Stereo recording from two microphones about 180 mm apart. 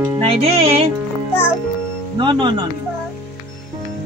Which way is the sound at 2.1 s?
25° right (ahead or behind).